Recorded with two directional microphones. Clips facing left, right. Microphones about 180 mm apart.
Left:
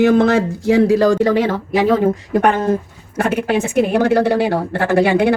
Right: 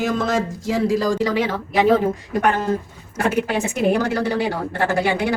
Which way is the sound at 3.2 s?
60° left (ahead or behind).